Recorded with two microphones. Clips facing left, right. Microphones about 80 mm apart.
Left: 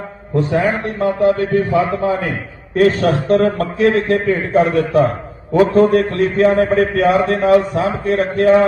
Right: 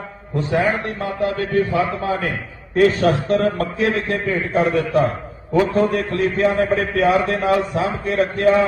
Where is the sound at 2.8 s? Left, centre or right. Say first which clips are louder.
Left 2 dB; left.